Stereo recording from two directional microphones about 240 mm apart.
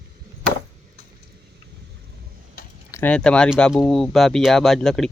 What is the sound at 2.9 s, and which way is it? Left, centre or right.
Speech, centre.